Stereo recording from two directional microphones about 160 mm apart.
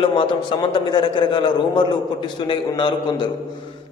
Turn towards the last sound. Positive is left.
turn(degrees=30)  # may be behind; listen again after turning